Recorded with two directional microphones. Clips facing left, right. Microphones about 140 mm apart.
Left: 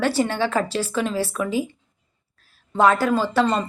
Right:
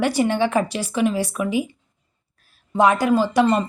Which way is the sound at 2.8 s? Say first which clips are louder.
Right 1 dB; 15° right (ahead or behind).